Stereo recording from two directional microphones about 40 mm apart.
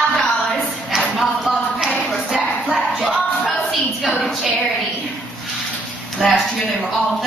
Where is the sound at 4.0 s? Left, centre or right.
Centre.